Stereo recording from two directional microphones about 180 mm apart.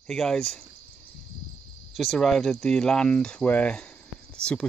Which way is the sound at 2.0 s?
Centre (ahead or behind).